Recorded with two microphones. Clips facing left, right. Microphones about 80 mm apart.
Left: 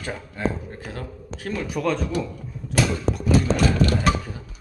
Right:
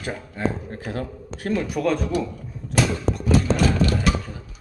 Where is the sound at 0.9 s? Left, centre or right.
Right.